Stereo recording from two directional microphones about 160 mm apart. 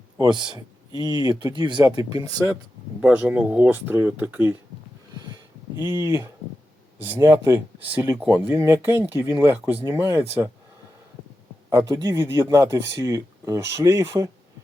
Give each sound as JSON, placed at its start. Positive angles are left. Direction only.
{"t": 0.2, "sound": "speech", "side_deg": -25}
{"t": 3.0, "sound": "speech", "side_deg": -5}
{"t": 6.0, "sound": "speech", "side_deg": -15}
{"t": 11.7, "sound": "speech", "side_deg": -15}